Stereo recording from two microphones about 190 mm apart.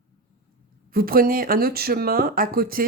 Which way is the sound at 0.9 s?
50° right (ahead or behind).